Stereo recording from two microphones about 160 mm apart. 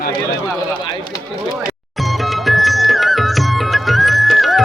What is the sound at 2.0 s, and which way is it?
Music, centre (ahead or behind).